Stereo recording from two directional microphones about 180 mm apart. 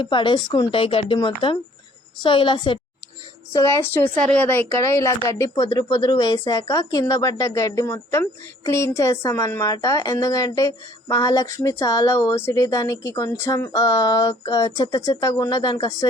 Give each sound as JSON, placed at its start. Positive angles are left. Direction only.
{"t": 0.0, "sound": "speech", "side_deg": 25}
{"t": 3.5, "sound": "a woman's voice", "side_deg": 15}